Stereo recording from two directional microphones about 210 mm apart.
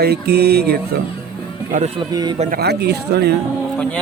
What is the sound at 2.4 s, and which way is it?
Speech, 45° right (ahead or behind).